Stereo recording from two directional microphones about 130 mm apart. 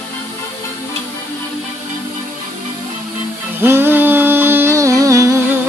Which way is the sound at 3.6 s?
15° right (ahead or behind).